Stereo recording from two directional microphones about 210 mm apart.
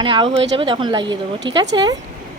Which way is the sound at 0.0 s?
25° right (ahead or behind).